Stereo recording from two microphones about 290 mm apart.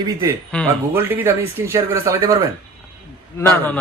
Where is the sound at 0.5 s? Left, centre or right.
Centre.